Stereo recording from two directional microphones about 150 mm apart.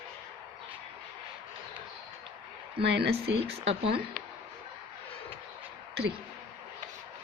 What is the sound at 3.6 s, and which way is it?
Speech, 40° right (ahead or behind).